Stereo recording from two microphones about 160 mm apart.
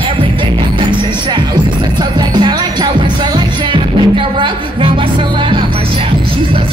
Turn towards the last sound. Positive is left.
turn(degrees=-30)  # may be behind; listen again after turning